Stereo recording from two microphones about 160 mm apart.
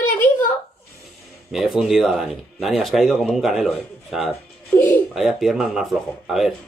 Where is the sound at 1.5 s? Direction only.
5° right (ahead or behind).